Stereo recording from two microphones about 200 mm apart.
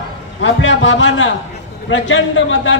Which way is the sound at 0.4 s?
70° left (ahead or behind).